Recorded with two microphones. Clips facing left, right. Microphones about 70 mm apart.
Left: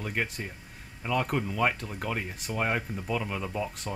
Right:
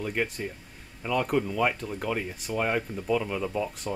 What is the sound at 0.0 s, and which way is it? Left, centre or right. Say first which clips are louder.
Speech: right 3 dB; centre.